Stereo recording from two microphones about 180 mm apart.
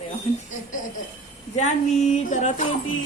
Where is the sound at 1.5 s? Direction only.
40° left (ahead or behind).